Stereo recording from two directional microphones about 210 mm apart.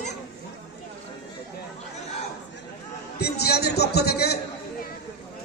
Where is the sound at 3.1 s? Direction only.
50° left (ahead or behind).